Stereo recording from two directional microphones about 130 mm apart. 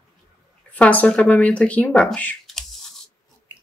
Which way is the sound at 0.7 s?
10° left (ahead or behind).